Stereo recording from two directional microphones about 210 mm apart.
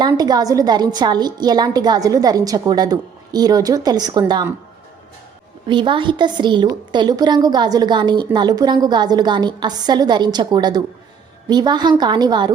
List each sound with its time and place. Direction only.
0.0 s a woman's voice: 20° right (ahead or behind)
5.6 s a woman's voice: 25° right (ahead or behind)